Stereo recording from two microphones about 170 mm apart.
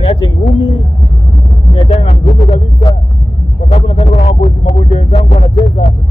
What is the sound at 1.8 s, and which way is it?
Music, 35° left (ahead or behind).